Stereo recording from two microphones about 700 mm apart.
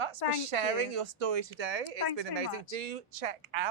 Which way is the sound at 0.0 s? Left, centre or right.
Right.